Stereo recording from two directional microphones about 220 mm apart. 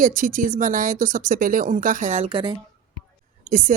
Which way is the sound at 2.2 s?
20° right (ahead or behind).